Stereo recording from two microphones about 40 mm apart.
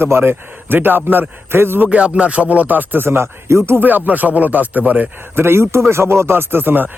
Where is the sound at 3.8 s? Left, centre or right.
Right.